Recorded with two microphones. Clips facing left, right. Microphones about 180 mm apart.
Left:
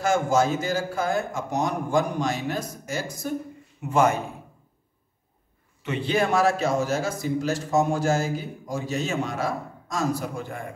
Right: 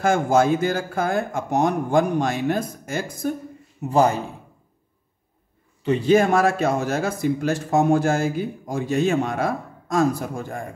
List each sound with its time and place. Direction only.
0.0 s a man's voice: 55° right (ahead or behind)
3.9 s a man's voice: 35° right (ahead or behind)
5.8 s a man's voice: 35° right (ahead or behind)